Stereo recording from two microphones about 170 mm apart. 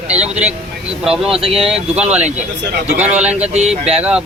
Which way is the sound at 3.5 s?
40° right (ahead or behind).